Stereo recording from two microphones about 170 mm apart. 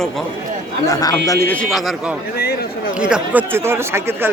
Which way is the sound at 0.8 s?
20° left (ahead or behind).